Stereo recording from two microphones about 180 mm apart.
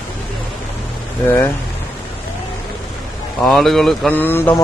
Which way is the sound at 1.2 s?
10° left (ahead or behind).